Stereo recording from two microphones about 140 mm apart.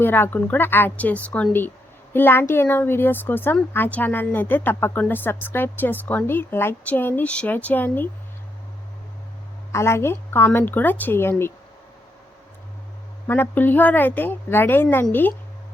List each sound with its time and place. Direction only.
0.0 s speech: 15° left (ahead or behind)
9.7 s speech: 20° left (ahead or behind)
13.2 s speech: 15° left (ahead or behind)